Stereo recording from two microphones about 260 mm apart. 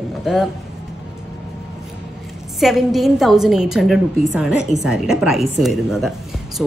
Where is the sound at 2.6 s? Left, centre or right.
Centre.